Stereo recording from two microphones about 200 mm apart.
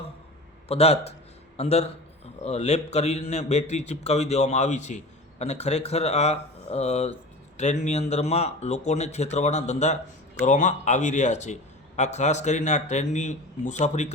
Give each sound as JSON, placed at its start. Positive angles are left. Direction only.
{"t": 0.7, "sound": "a man's voice", "side_deg": 30}